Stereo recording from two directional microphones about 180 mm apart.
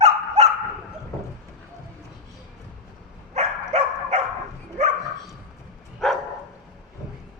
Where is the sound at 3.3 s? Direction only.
40° right (ahead or behind).